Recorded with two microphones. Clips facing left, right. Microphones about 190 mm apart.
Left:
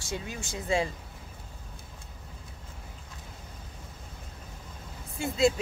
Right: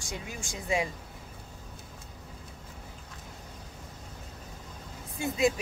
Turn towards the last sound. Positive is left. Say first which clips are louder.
# left 2 dB
turn(degrees=-15)  # may be behind; listen again after turning